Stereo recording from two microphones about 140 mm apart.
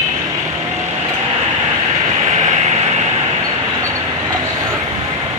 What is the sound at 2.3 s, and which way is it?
Vehicle, 55° right (ahead or behind).